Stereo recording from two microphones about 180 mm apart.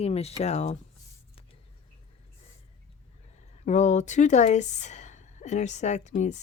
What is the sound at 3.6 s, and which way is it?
A woman's voice, 40° left (ahead or behind).